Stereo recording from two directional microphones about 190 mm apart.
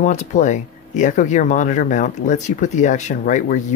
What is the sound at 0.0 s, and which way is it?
Speech, 40° left (ahead or behind).